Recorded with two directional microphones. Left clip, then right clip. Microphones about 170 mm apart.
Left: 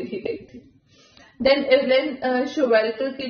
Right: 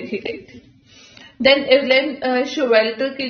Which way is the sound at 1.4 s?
5° right (ahead or behind).